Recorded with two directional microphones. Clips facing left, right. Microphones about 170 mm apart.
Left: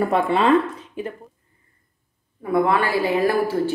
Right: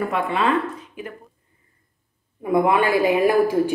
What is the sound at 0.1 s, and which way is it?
Speech, 35° left (ahead or behind).